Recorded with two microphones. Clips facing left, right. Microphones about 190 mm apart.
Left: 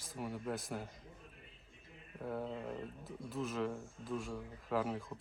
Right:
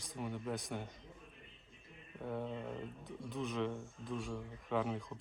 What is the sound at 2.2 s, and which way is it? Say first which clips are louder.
Speech: even; 5° left (ahead or behind).